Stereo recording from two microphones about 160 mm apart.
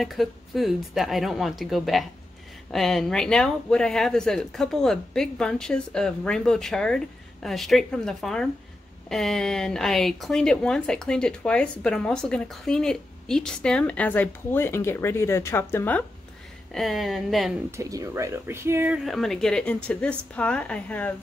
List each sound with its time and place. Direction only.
0.0 s a woman's voice: centre (ahead or behind)
16.7 s a woman's voice: centre (ahead or behind)
17.6 s speech: 20° right (ahead or behind)
19.0 s a woman's voice: centre (ahead or behind)